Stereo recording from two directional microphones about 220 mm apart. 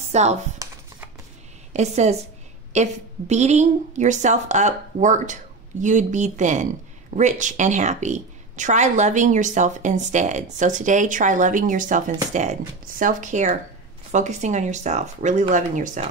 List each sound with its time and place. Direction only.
0.1 s speech: 30° right (ahead or behind)
0.6 s a sound: 15° right (ahead or behind)
1.7 s speech: 30° right (ahead or behind)